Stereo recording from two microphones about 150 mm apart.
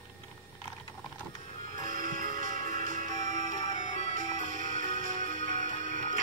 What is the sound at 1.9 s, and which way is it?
Music, 65° right (ahead or behind).